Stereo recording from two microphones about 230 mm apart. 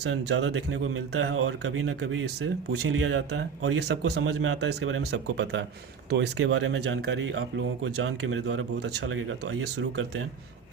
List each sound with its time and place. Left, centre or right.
0.0 s speech: right
4.4 s speech: right